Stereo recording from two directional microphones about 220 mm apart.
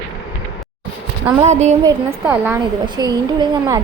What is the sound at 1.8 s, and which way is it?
Speech, 10° right (ahead or behind).